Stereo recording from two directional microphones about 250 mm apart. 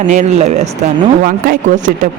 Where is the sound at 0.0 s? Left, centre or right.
Right.